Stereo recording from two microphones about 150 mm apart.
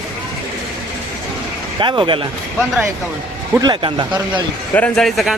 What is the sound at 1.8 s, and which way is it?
Speech, 35° right (ahead or behind).